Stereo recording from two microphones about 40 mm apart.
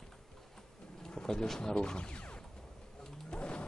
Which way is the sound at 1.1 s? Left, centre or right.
Centre.